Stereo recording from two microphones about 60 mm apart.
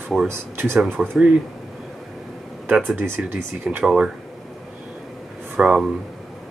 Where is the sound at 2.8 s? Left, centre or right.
Right.